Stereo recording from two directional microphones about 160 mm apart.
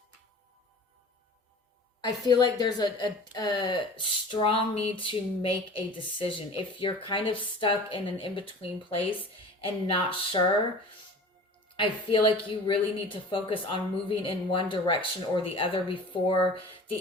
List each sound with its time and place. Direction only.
2.0 s speech: 25° left (ahead or behind)
11.8 s speech: 30° left (ahead or behind)